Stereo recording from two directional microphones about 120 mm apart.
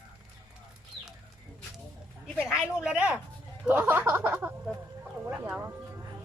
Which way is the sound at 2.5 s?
5° right (ahead or behind).